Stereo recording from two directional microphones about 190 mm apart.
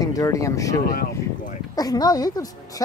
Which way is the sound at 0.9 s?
45° left (ahead or behind).